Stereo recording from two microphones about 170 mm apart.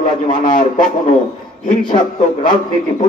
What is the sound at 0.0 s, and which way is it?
Speech, 50° left (ahead or behind).